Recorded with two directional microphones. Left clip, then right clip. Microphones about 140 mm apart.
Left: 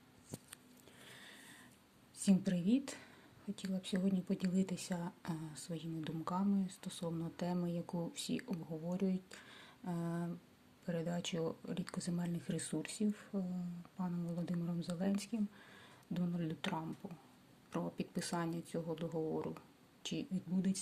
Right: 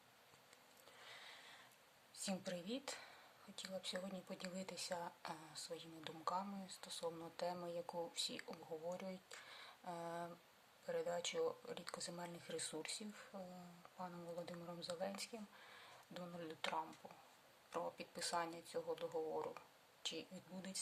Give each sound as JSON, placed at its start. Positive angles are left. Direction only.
{"t": 2.1, "sound": "a woman's voice", "side_deg": 10}